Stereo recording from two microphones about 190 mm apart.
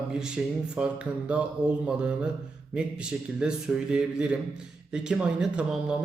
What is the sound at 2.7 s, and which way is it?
Speech, 5° right (ahead or behind).